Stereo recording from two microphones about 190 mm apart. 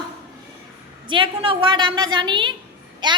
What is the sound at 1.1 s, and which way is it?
A woman's voice, 25° right (ahead or behind).